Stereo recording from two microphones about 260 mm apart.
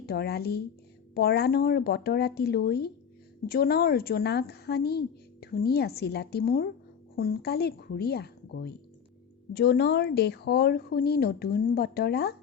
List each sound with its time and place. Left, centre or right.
0.0 s a woman's voice: left